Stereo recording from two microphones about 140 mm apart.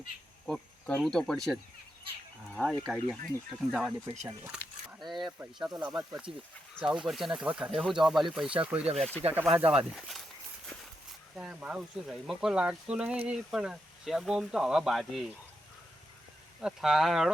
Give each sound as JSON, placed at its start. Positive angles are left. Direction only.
{"t": 0.4, "sound": "speech", "side_deg": 5}
{"t": 2.6, "sound": "speech", "side_deg": 0}
{"t": 4.5, "sound": "a sound", "side_deg": 0}
{"t": 5.5, "sound": "speech", "side_deg": -5}
{"t": 9.2, "sound": "speech", "side_deg": -45}
{"t": 9.6, "sound": "speech", "side_deg": -10}
{"t": 11.3, "sound": "speech", "side_deg": -5}
{"t": 16.6, "sound": "speech", "side_deg": -5}